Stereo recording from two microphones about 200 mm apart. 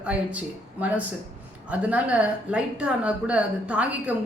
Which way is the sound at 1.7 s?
5° right (ahead or behind).